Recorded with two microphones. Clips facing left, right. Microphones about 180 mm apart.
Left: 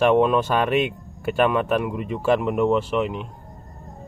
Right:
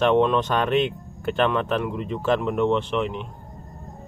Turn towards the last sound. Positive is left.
turn(degrees=5)  # may be behind; listen again after turning